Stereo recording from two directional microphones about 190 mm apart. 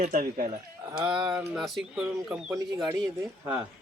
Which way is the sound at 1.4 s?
Centre (ahead or behind).